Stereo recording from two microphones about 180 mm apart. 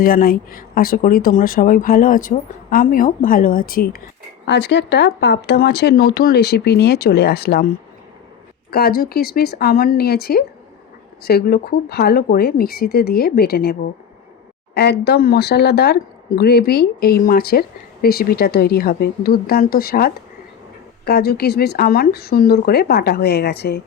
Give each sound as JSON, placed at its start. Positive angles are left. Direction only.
{"t": 0.0, "sound": "speech", "side_deg": 55}
{"t": 4.4, "sound": "speech", "side_deg": 70}
{"t": 8.7, "sound": "speech", "side_deg": 60}
{"t": 14.8, "sound": "speech", "side_deg": 65}